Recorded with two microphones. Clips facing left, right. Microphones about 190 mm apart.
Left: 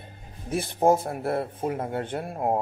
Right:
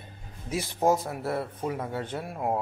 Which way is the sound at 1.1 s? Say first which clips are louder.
Left 3 dB; 25° left (ahead or behind).